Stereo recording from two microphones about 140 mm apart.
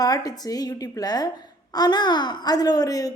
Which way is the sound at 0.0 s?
25° left (ahead or behind).